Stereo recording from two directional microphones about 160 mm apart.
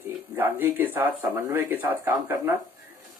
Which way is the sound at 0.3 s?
10° right (ahead or behind).